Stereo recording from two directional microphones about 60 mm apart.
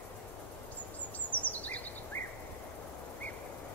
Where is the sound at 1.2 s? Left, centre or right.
Left.